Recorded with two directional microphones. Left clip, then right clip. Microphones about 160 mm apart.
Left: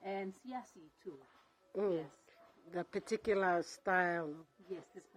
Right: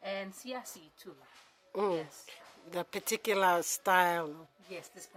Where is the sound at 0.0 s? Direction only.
30° right (ahead or behind).